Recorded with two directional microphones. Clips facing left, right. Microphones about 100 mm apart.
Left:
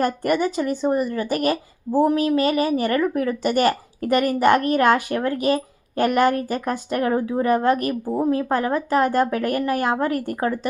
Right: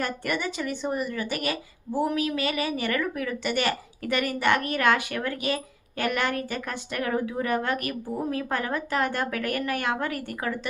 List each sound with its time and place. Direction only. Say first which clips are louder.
0.0 s speech: left 9 dB; 40° left (ahead or behind)